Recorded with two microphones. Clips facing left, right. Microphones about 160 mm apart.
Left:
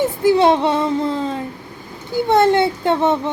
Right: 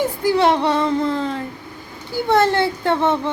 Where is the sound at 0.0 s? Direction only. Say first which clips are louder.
Left 3 dB; 25° left (ahead or behind).